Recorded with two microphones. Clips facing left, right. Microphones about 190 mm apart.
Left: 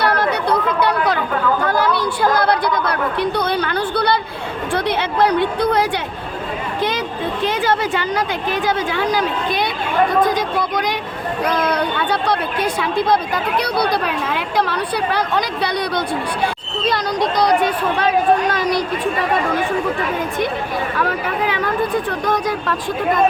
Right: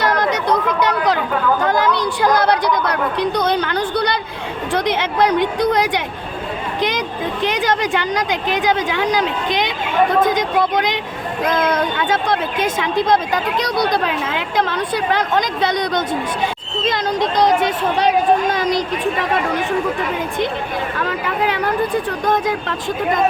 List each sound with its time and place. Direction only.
0.0 s a sound: 15° right (ahead or behind)
1.6 s a woman's voice: 20° right (ahead or behind)
7.4 s a woman's voice: 15° right (ahead or behind)
12.0 s speech: 20° right (ahead or behind)